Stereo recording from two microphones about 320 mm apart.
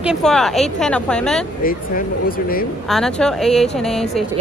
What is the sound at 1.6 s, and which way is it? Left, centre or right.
Speech, left.